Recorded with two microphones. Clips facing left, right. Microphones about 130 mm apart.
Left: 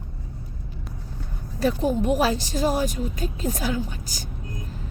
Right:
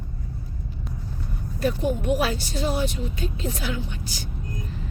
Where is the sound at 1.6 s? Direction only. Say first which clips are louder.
Left 2 dB; 35° left (ahead or behind).